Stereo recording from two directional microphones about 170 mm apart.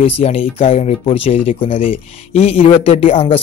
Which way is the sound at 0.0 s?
35° left (ahead or behind).